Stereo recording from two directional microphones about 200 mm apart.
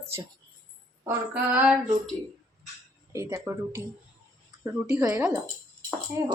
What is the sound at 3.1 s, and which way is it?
A woman's voice, 15° right (ahead or behind).